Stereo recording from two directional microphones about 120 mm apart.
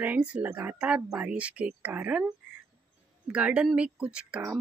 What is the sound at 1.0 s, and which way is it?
Speech, 25° right (ahead or behind).